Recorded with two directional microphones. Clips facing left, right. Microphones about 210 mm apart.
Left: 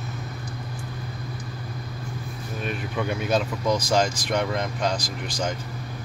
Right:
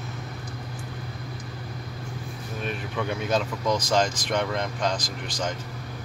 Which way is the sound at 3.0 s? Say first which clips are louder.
Left 2 dB; 10° left (ahead or behind).